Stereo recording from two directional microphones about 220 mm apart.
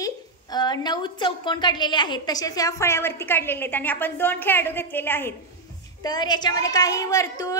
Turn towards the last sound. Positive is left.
turn(degrees=15)  # may be behind; listen again after turning